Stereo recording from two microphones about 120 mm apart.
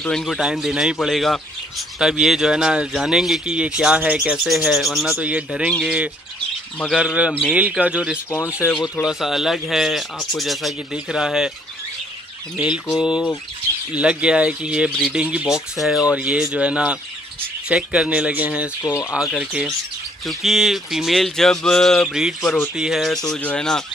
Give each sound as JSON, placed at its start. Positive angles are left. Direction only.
{"t": 0.0, "sound": "speech", "side_deg": 5}
{"t": 8.3, "sound": "speech", "side_deg": 20}
{"t": 9.0, "sound": "speech", "side_deg": -5}
{"t": 12.5, "sound": "speech", "side_deg": -10}